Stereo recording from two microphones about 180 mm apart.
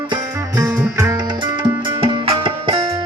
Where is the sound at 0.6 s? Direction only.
20° right (ahead or behind).